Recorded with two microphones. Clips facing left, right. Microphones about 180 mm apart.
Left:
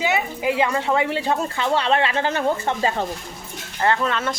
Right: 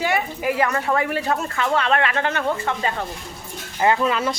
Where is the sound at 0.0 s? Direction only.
20° left (ahead or behind).